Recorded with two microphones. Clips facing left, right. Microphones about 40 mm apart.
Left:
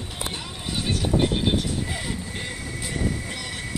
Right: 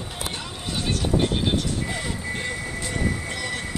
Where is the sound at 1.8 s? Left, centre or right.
Centre.